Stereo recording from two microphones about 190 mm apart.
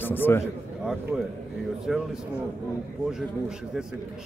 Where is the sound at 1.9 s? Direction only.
Centre (ahead or behind).